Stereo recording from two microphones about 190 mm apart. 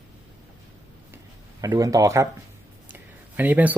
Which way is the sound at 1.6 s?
15° right (ahead or behind).